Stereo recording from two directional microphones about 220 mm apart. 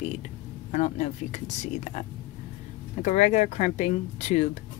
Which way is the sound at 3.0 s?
30° left (ahead or behind).